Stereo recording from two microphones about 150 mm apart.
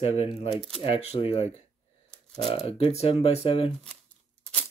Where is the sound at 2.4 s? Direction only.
40° left (ahead or behind).